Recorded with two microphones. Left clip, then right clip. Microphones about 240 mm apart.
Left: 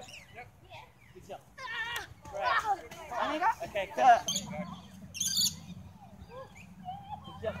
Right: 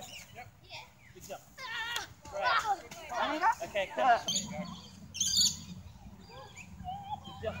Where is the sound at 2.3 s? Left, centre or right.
Centre.